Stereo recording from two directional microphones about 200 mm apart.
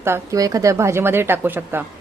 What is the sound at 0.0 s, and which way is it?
Speech, 15° right (ahead or behind).